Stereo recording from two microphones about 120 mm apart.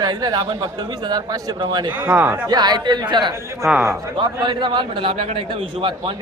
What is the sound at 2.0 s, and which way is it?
Speech, 15° right (ahead or behind).